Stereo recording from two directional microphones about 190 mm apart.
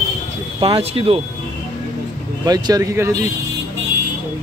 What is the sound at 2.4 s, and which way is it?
Speech, 20° right (ahead or behind).